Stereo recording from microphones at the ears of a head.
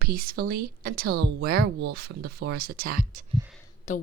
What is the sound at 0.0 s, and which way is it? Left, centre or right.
Speech, right.